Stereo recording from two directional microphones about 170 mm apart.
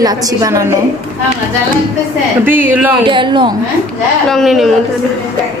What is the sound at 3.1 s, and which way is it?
Speech, 30° right (ahead or behind).